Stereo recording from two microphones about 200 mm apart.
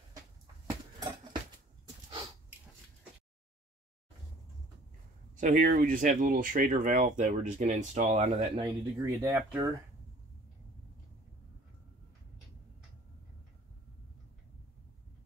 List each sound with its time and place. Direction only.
0.9 s horse: 20° right (ahead or behind)
5.3 s a sound: 40° right (ahead or behind)
5.7 s speech: 45° right (ahead or behind)
8.5 s speech: 20° right (ahead or behind)